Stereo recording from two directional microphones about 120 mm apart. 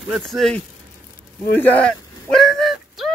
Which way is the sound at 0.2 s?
5° left (ahead or behind).